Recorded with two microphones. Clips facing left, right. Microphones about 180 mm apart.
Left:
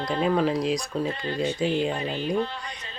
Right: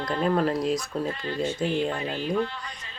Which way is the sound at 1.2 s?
20° left (ahead or behind).